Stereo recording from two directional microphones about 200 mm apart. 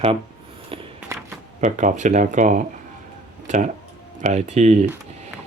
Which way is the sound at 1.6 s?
35° right (ahead or behind).